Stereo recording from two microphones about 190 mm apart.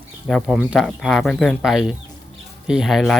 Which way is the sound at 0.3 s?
Centre (ahead or behind).